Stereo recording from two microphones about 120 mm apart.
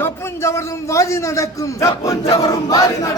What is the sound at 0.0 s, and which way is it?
A man's voice, 25° left (ahead or behind).